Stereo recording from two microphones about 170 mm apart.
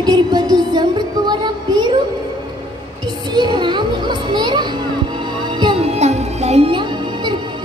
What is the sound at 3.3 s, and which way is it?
Music, 25° right (ahead or behind).